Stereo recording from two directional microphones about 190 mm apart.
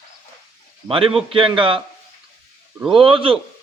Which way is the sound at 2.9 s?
25° right (ahead or behind).